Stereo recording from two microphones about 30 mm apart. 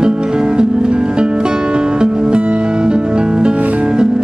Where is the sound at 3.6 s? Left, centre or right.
Right.